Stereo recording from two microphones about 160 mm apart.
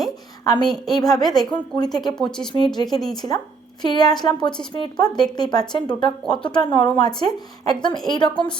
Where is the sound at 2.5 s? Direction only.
40° right (ahead or behind).